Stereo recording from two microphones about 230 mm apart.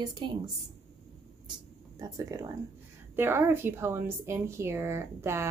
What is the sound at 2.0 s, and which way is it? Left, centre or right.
A woman's voice, centre.